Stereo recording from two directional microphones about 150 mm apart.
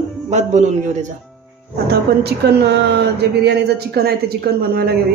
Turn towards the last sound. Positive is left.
turn(degrees=-90)